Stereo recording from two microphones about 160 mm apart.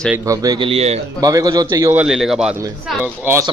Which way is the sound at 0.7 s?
40° right (ahead or behind).